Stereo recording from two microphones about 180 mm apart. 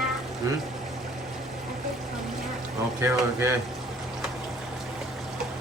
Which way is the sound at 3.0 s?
15° right (ahead or behind).